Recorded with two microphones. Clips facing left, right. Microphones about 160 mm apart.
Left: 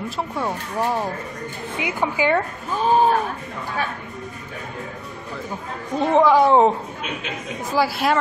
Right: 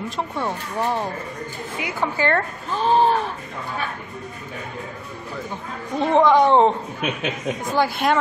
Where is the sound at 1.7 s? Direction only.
15° left (ahead or behind).